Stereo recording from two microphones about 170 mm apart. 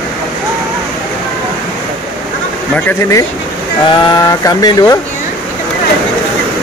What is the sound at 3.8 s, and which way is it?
Speech, 25° left (ahead or behind).